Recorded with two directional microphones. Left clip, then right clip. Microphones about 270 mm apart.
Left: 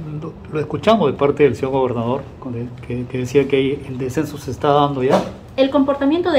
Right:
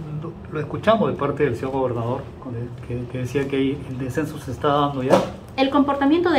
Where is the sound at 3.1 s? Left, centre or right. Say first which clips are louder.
Left 8 dB; left.